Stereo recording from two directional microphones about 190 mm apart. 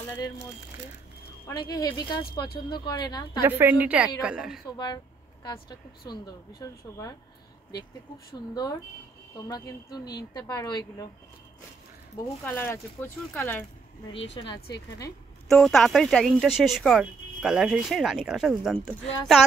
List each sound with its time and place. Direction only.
0.0 s a sound: 10° left (ahead or behind)
1.5 s a woman's voice: 20° left (ahead or behind)
3.4 s a woman's voice: 10° right (ahead or behind)
4.6 s a woman's voice: 20° left (ahead or behind)
9.5 s a woman's voice: 20° left (ahead or behind)
12.4 s speech: 10° left (ahead or behind)
14.4 s a woman's voice: 25° left (ahead or behind)
15.4 s speech: centre (ahead or behind)